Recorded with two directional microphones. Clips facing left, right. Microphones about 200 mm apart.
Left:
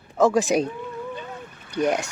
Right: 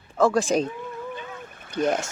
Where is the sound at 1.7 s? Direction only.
15° left (ahead or behind).